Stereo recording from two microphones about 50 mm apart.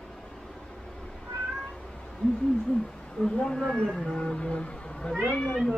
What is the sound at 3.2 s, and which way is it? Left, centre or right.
Speech, centre.